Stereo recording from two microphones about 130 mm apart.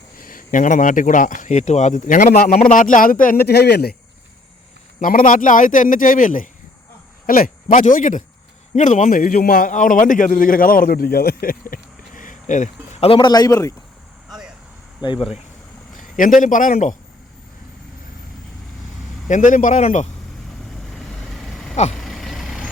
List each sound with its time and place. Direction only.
0.2 s speech: 90° left
4.9 s a man's voice: 90° left
8.7 s a man's voice: 70° left (ahead or behind); by 10.8 s 90° left
11.4 s a sound: 90° left; by 13.1 s 65° left (ahead or behind)
13.1 s speech: 35° left (ahead or behind)
14.3 s vehicle: 5° right (ahead or behind)
15.0 s speech: 40° left (ahead or behind)
16.0 s a man's voice: 90° left
19.3 s a man's voice: 75° left (ahead or behind)
20.9 s vehicle: centre (ahead or behind)